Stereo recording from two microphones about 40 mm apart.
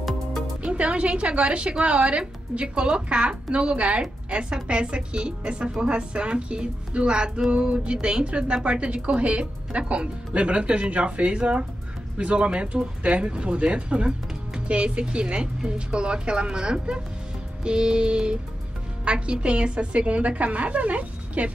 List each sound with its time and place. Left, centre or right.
0.6 s a woman's voice: right